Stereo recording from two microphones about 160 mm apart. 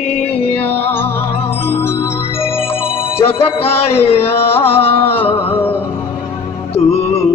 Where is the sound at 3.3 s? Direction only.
35° left (ahead or behind).